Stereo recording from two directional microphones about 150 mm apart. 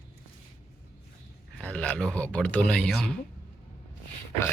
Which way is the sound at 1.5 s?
10° left (ahead or behind).